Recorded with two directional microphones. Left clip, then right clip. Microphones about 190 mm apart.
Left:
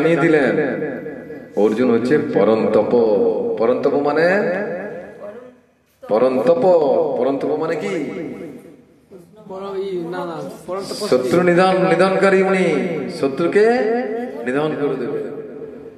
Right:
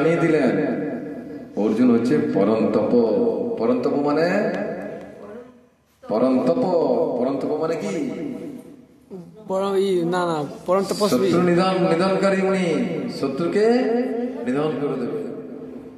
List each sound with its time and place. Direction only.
0.0 s a man's voice: 30° left (ahead or behind)
6.0 s a man's voice: 30° left (ahead or behind)
9.5 s speech: 65° right (ahead or behind)
11.1 s a man's voice: 25° left (ahead or behind)